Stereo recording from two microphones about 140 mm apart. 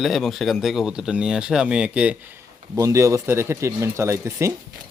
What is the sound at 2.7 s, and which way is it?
Speech, 20° right (ahead or behind).